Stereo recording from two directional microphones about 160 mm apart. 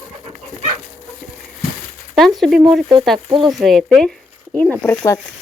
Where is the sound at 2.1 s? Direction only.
Centre (ahead or behind).